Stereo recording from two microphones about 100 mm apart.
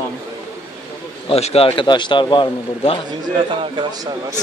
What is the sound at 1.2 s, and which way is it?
A man's voice, 85° left.